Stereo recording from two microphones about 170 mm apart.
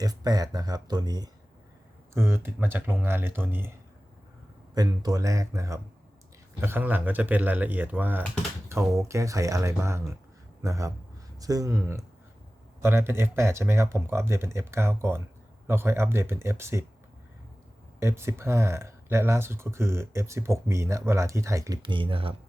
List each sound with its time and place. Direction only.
0.0 s speech: 20° right (ahead or behind)
4.7 s speech: 20° right (ahead or behind)
18.0 s speech: 15° right (ahead or behind); by 22.4 s 30° right (ahead or behind)